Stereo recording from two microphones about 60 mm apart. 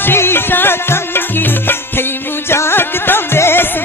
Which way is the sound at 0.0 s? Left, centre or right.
Left.